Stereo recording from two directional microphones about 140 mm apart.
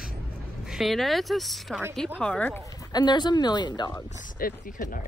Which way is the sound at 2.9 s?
30° left (ahead or behind).